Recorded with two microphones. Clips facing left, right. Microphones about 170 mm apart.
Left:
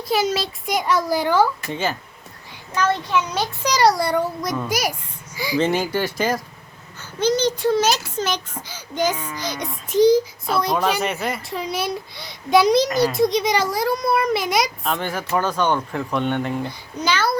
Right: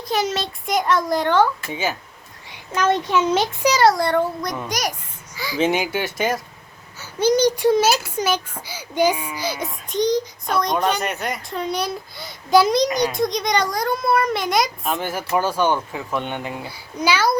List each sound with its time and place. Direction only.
0.1 s a child's voice: centre (ahead or behind)
1.7 s a child's voice: 5° right (ahead or behind)
2.7 s a child's voice: 20° right (ahead or behind)
3.6 s a child's voice: 5° right (ahead or behind)
5.5 s a child's voice: 5° right (ahead or behind)
7.0 s a child's voice: 10° right (ahead or behind)